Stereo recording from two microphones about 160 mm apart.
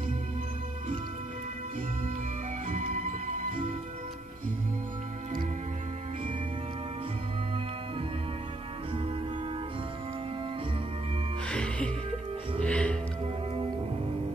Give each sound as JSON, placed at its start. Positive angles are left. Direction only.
{"t": 2.7, "sound": "music", "side_deg": -50}
{"t": 11.4, "sound": "music", "side_deg": 5}